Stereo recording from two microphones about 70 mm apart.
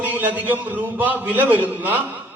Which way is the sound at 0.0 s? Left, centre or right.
Right.